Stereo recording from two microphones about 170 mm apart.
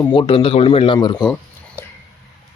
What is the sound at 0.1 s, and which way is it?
Speech, 30° left (ahead or behind).